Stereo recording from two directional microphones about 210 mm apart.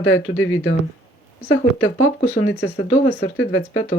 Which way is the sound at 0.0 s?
75° left (ahead or behind).